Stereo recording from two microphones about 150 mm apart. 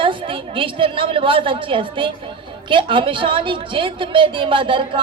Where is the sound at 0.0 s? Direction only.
35° right (ahead or behind).